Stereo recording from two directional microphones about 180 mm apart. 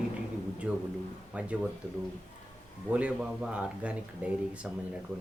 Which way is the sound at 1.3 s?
5° right (ahead or behind).